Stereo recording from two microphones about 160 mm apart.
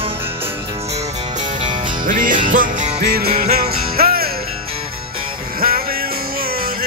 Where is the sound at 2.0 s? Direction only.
60° right (ahead or behind).